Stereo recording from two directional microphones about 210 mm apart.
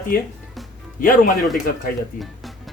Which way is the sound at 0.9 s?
40° left (ahead or behind).